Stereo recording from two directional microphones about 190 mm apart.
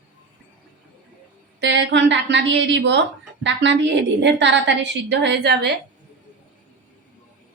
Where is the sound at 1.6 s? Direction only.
70° right (ahead or behind).